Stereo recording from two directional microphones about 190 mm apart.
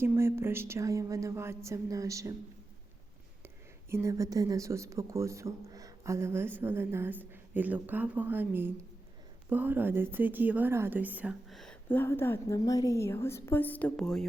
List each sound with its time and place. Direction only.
0.0 s speech: 15° right (ahead or behind)
3.8 s speech: 15° right (ahead or behind); by 14.3 s 5° left (ahead or behind)